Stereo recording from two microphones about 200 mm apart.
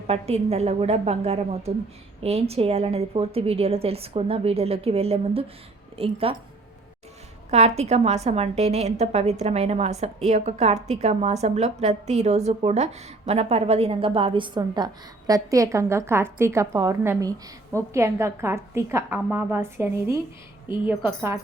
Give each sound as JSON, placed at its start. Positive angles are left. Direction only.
{"t": 0.1, "sound": "a woman's voice", "side_deg": -30}
{"t": 7.5, "sound": "a woman's voice", "side_deg": -30}